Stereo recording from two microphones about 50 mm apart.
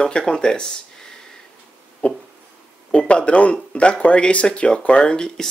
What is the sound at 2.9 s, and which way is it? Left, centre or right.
Speech, left.